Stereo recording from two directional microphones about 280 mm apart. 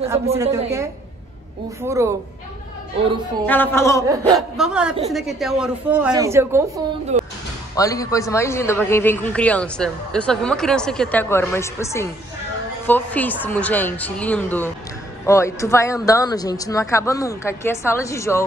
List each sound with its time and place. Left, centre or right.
0.4 s a woman's voice: centre
1.9 s a woman's voice: centre
3.4 s a man's voice: centre
4.4 s speech: centre
7.1 s a sound: right
7.7 s a man's voice: centre